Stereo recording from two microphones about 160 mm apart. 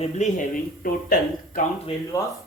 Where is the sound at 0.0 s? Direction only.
50° left (ahead or behind).